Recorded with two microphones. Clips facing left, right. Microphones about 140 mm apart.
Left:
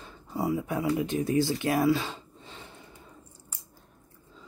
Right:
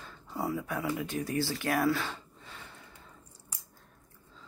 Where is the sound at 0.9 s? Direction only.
25° left (ahead or behind).